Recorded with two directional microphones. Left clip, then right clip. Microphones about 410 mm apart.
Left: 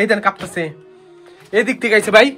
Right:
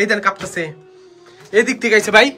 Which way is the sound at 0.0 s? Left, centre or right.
Centre.